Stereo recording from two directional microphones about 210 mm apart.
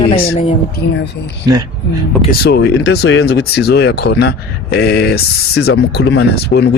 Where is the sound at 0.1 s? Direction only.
30° left (ahead or behind).